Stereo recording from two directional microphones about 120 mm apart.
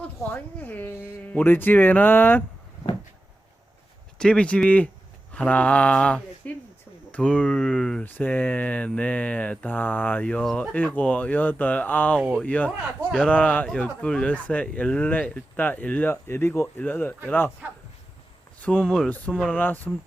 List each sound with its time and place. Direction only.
0.2 s speech: 15° left (ahead or behind)
4.2 s speech: 10° left (ahead or behind)
8.0 s speech: 15° left (ahead or behind)
18.6 s speech: 10° left (ahead or behind)